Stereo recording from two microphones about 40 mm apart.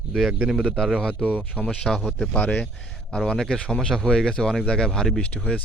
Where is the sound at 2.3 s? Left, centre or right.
Left.